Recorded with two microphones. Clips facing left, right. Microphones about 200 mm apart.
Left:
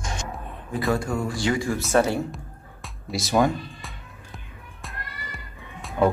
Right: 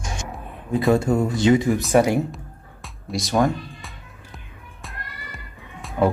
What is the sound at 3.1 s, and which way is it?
Speech, 5° left (ahead or behind).